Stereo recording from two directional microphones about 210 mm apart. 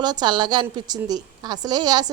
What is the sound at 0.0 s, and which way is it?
A woman's voice, 20° right (ahead or behind).